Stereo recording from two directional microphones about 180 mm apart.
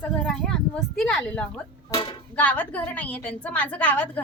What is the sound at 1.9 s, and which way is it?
Speech, 30° left (ahead or behind).